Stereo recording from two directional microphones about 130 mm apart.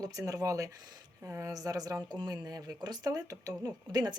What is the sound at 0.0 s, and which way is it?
Speech, 25° right (ahead or behind).